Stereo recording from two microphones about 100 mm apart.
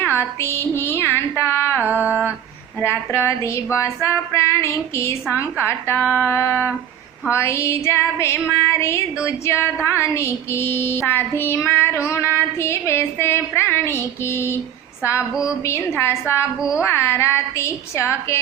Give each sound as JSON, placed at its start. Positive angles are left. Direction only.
{"t": 0.0, "sound": "female singing", "side_deg": 25}
{"t": 1.9, "sound": "female singing", "side_deg": -15}
{"t": 2.8, "sound": "female singing", "side_deg": 25}
{"t": 15.6, "sound": "female singing", "side_deg": 25}
{"t": 16.6, "sound": "female singing", "side_deg": -10}
{"t": 16.8, "sound": "female singing", "side_deg": 25}